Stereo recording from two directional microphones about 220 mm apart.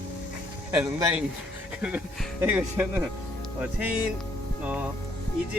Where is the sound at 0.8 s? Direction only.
5° right (ahead or behind).